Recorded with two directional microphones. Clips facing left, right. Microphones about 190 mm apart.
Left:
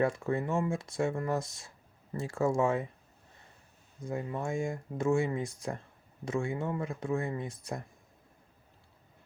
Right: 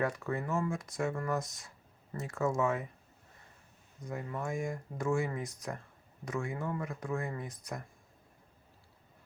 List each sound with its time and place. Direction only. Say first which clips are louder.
0.0 s speech: left 4 dB; 30° left (ahead or behind)
4.0 s speech: left 3 dB; 25° left (ahead or behind)